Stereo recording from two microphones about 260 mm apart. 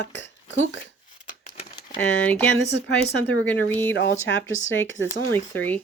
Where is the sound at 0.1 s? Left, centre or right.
Left.